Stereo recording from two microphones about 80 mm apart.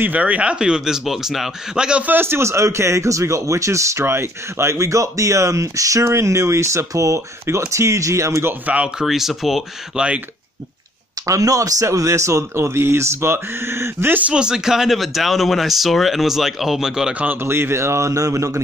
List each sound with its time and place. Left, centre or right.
0.0 s speech: centre
2.1 s speech: right
8.6 s speech: centre
9.0 s speech: centre
11.2 s speech: right
14.3 s speech: centre
17.1 s speech: centre
17.4 s speech: right